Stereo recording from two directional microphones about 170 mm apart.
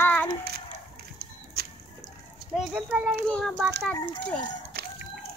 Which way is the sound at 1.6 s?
70° right (ahead or behind).